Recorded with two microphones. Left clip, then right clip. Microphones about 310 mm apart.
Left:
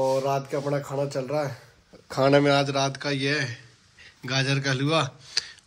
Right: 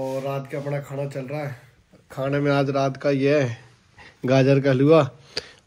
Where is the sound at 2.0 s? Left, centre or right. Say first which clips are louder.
Left 5 dB; left.